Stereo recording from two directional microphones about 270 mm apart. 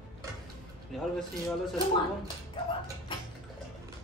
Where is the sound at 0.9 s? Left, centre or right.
Centre.